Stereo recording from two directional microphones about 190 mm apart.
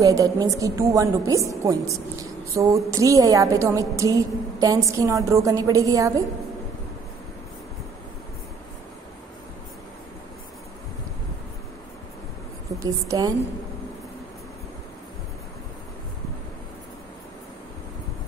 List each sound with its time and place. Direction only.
0.0 s a woman's voice: 15° right (ahead or behind)
12.8 s a woman's voice: 20° right (ahead or behind)